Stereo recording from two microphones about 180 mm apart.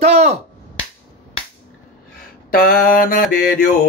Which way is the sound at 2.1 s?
55° left (ahead or behind).